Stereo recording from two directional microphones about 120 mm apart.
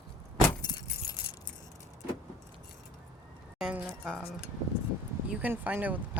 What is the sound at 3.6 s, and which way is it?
Speech, 10° right (ahead or behind).